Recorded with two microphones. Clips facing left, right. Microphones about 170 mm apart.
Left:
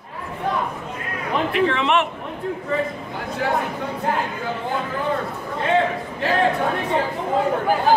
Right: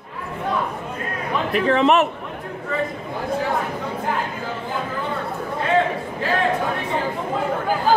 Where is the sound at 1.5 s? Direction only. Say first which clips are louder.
Right 4 dB; 40° right (ahead or behind).